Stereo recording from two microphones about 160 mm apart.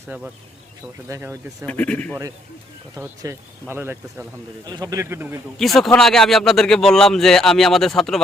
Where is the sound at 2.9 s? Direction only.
15° right (ahead or behind).